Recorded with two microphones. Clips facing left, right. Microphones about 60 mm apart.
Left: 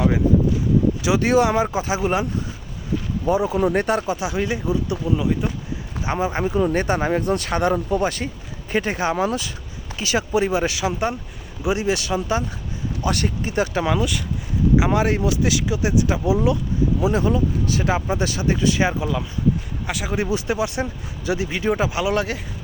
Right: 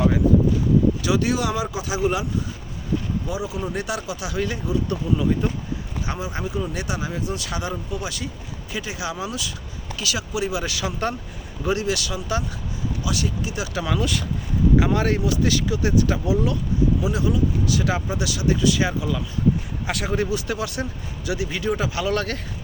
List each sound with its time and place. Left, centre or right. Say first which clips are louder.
1.0 s speech: left 4 dB; left
3.2 s speech: left 9 dB; left
4.3 s speech: left 2 dB; left
4.9 s speech: left 1 dB; centre
6.1 s speech: left 8 dB; left
10.8 s speech: left 3 dB; left
11.9 s speech: left 4 dB; left
13.0 s speech: left 4 dB; left
14.0 s speech: left 1 dB; centre
14.8 s speech: left 2 dB; left
17.0 s speech: left 3 dB; left
19.9 s speech: right 1 dB; centre
20.1 s speech: left 4 dB; left